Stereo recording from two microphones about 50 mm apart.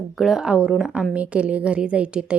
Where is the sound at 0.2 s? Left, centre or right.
Centre.